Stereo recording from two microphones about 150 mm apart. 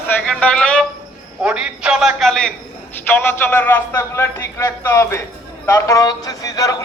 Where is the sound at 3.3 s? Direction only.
15° left (ahead or behind).